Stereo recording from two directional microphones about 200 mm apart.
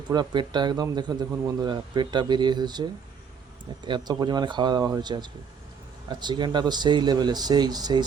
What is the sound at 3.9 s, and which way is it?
Speech, 20° right (ahead or behind).